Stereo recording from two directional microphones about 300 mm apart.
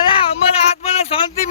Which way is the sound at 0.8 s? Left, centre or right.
Centre.